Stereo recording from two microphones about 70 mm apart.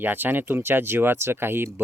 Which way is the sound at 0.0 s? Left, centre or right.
Right.